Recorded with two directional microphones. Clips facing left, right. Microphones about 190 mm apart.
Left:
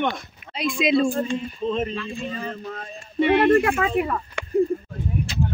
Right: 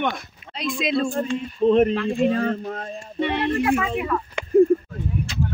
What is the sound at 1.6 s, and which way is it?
Speech, 60° right (ahead or behind).